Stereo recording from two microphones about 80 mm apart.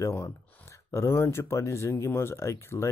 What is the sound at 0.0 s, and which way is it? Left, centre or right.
Speech, left.